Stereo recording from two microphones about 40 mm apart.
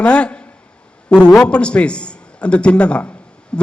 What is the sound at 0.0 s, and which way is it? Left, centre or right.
A man's voice, left.